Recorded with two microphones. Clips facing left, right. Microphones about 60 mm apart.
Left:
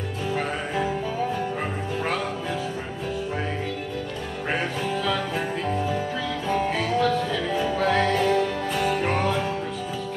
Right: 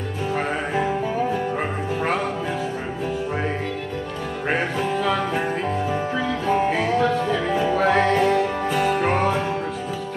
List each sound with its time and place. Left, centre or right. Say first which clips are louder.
4.5 s music: right 4 dB; right
6.6 s music: right 1 dB; right